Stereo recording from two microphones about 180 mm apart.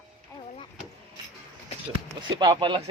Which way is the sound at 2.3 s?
20° right (ahead or behind).